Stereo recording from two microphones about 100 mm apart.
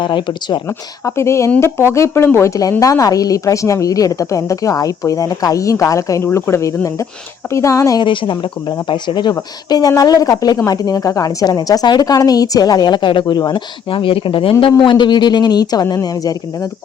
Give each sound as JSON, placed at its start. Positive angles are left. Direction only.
{"t": 0.0, "sound": "a woman's voice", "side_deg": 50}
{"t": 1.0, "sound": "speech", "side_deg": 30}
{"t": 2.8, "sound": "a woman's voice", "side_deg": 35}
{"t": 8.0, "sound": "a woman's voice", "side_deg": 55}
{"t": 14.6, "sound": "a woman's voice", "side_deg": 55}